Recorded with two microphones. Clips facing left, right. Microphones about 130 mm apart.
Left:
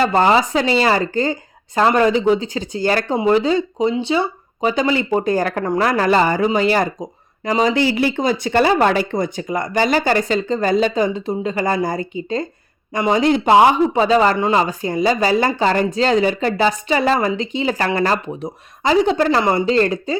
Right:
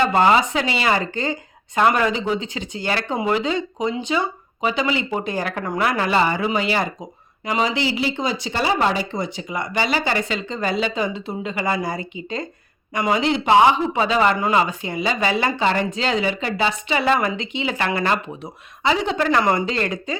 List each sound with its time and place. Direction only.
0.0 s speech: 35° left (ahead or behind)
12.9 s speech: 25° left (ahead or behind)
13.1 s speech: 45° left (ahead or behind)